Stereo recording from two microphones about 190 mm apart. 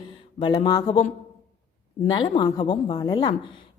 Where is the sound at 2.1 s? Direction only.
20° left (ahead or behind).